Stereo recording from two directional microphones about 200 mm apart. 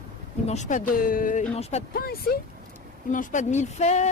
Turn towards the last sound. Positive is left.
turn(degrees=35)  # may be behind; listen again after turning